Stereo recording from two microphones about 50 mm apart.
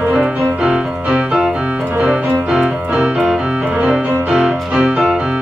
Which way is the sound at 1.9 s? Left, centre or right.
Right.